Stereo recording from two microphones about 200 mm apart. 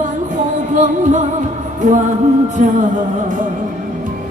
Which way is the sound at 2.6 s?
40° right (ahead or behind).